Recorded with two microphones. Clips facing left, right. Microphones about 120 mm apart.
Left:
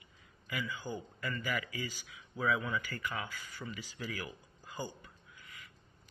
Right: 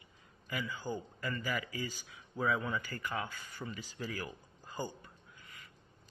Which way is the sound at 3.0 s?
15° right (ahead or behind).